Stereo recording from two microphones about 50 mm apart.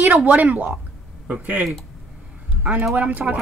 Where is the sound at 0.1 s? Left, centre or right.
Right.